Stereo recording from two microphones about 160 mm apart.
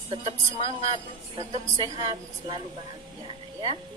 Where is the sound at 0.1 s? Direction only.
40° right (ahead or behind).